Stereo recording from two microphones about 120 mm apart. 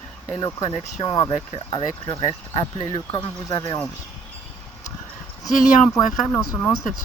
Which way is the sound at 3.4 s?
35° left (ahead or behind).